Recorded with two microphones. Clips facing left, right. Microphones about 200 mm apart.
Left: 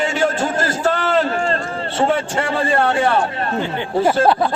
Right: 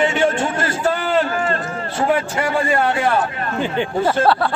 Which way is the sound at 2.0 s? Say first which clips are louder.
Even; 30° left (ahead or behind).